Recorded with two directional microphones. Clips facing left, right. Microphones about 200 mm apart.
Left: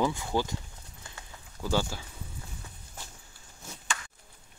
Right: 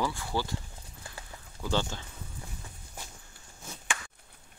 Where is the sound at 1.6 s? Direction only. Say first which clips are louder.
Left 1 dB; 10° left (ahead or behind).